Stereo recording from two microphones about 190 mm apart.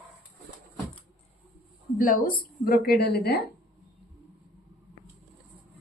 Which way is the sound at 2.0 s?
45° left (ahead or behind).